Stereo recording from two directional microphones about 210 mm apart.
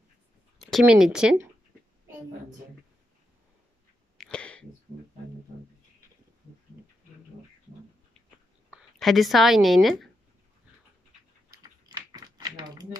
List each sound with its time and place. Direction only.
0.6 s speech: centre (ahead or behind)
4.2 s sneeze: 5° left (ahead or behind)
8.6 s speech: centre (ahead or behind)
11.6 s typing: 20° right (ahead or behind)